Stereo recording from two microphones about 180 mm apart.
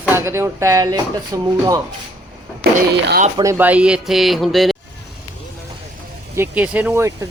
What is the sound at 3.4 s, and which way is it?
A man's voice, 15° right (ahead or behind).